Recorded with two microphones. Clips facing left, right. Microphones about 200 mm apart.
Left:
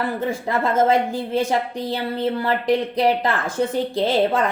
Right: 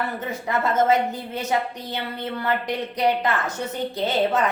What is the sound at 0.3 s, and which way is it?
A woman's voice, 30° left (ahead or behind).